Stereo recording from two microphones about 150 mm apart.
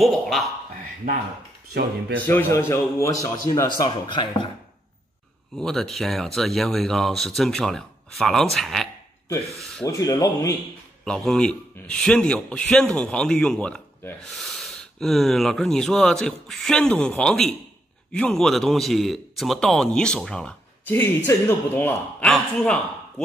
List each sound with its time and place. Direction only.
0.0 s a man's voice: centre (ahead or behind)
1.7 s speech: 90° right
2.2 s a man's voice: 15° left (ahead or behind); by 4.5 s 30° left (ahead or behind)
5.6 s a man's voice: centre (ahead or behind)
9.8 s speech: 25° left (ahead or behind)
11.1 s a man's voice: 5° left (ahead or behind)